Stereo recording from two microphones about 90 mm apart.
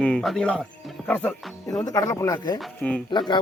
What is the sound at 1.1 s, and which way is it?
Speech, 20° left (ahead or behind).